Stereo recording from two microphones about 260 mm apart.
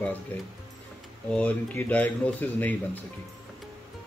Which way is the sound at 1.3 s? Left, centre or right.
Centre.